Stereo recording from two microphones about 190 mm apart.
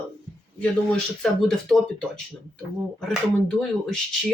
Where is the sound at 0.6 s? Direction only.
5° left (ahead or behind).